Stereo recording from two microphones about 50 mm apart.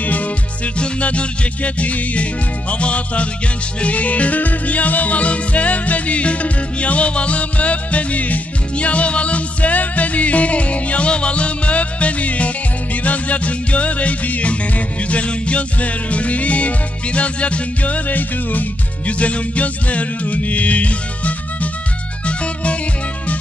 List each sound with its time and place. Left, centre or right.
0.7 s music: left